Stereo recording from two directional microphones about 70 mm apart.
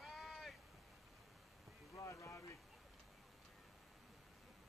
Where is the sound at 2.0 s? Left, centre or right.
Left.